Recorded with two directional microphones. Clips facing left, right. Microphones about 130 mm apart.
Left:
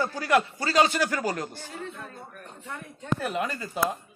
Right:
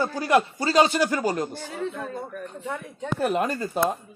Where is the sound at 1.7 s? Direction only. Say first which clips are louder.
Right 8 dB; 90° right.